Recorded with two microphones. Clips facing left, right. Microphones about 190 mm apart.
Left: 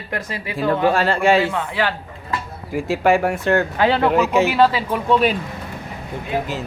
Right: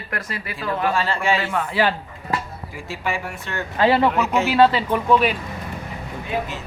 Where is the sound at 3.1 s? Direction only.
70° left (ahead or behind).